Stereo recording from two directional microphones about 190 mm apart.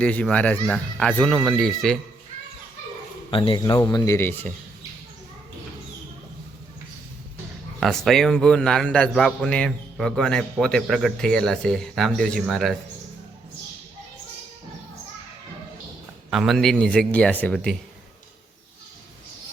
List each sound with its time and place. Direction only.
0.0 s a child's voice: 5° left (ahead or behind)
3.2 s a man's voice: 25° left (ahead or behind); by 4.5 s 10° left (ahead or behind)
7.8 s a man's voice: centre (ahead or behind)
16.3 s a man's voice: centre (ahead or behind)